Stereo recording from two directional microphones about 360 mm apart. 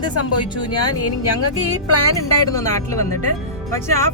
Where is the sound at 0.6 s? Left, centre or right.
Centre.